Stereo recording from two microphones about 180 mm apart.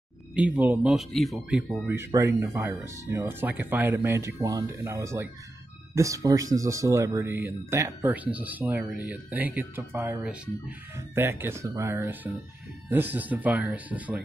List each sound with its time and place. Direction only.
0.3 s speech: 5° right (ahead or behind)
1.9 s speech: 15° right (ahead or behind)